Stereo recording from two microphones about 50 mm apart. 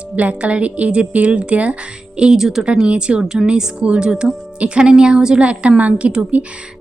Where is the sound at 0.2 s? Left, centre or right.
Right.